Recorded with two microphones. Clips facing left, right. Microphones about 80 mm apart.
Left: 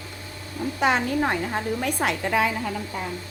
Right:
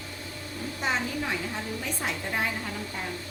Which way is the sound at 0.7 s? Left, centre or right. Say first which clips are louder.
Left 8 dB; left.